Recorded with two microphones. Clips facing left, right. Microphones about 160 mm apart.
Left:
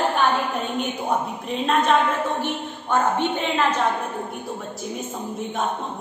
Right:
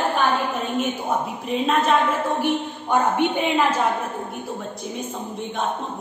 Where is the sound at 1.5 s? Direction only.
Centre (ahead or behind).